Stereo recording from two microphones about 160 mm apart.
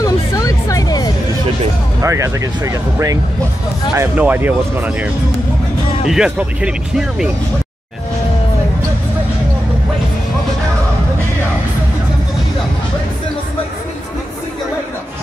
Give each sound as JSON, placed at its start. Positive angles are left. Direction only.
{"t": 0.0, "sound": "music", "side_deg": 20}
{"t": 2.0, "sound": "speech", "side_deg": -20}